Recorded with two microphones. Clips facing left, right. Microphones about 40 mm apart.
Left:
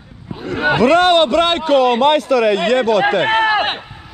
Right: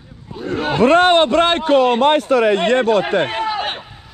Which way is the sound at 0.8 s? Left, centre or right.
Right.